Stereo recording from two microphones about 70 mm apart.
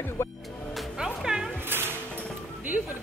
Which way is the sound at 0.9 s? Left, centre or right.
Centre.